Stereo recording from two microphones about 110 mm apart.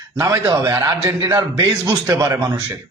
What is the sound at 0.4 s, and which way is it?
A man's voice, 35° right (ahead or behind).